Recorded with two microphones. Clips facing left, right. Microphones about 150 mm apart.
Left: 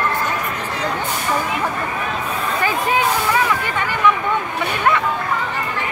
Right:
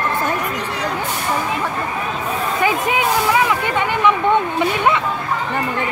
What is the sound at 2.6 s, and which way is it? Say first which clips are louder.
Speech: even; 15° right (ahead or behind).